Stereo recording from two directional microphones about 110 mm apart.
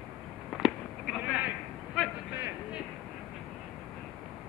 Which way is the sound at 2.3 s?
20° right (ahead or behind).